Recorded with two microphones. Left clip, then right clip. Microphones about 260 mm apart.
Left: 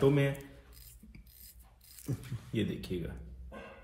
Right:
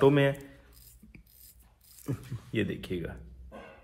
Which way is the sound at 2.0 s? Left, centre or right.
Centre.